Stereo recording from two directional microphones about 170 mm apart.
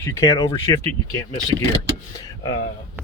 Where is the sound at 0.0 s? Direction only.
15° left (ahead or behind).